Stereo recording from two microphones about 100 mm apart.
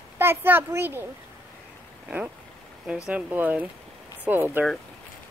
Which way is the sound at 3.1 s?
15° right (ahead or behind).